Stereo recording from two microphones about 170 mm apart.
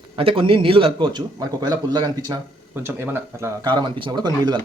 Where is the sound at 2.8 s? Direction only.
15° right (ahead or behind).